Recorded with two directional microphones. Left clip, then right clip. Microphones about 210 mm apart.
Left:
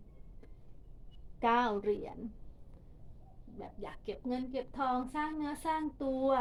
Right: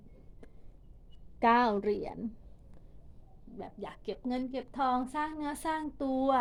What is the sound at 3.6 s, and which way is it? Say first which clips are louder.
A woman's voice: right 3 dB; 50° right (ahead or behind).